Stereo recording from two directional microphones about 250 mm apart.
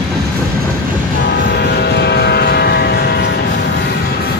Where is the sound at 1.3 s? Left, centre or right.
Left.